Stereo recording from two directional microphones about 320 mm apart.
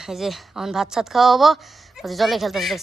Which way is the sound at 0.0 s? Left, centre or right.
Centre.